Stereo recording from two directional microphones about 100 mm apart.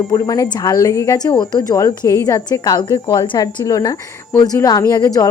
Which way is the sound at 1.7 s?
35° left (ahead or behind).